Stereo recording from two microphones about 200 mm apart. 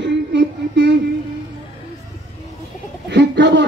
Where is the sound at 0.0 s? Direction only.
60° right (ahead or behind).